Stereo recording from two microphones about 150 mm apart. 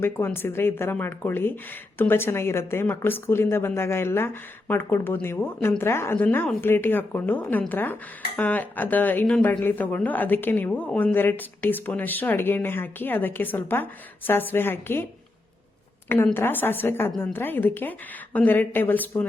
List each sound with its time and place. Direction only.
0.3 s speech: 15° left (ahead or behind)
16.0 s speech: 15° left (ahead or behind)